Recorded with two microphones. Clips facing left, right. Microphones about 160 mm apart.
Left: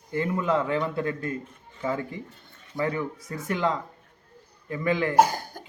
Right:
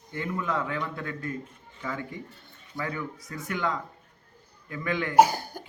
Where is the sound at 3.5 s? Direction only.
30° left (ahead or behind).